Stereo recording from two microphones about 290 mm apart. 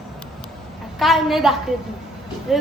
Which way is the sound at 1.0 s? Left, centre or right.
Centre.